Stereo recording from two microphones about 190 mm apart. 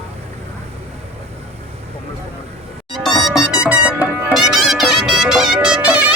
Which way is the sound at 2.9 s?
Centre (ahead or behind).